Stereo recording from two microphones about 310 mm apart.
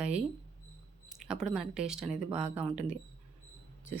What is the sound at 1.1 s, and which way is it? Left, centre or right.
Speech, centre.